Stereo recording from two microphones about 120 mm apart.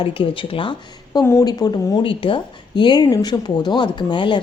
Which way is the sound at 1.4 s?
35° left (ahead or behind).